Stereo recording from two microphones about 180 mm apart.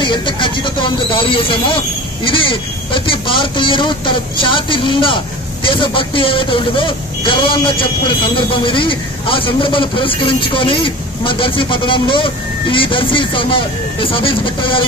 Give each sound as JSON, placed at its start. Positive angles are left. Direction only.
{"t": 0.0, "sound": "speech", "side_deg": 25}